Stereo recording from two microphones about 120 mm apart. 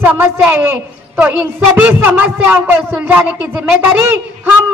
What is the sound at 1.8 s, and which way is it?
A man's voice, 15° right (ahead or behind).